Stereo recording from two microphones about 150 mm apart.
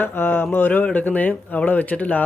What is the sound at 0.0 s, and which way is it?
Speech, 10° left (ahead or behind).